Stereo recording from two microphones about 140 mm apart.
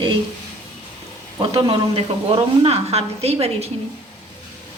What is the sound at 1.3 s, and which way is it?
A woman's voice, 40° right (ahead or behind).